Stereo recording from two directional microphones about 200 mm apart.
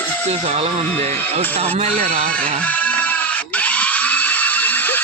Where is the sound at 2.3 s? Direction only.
5° left (ahead or behind).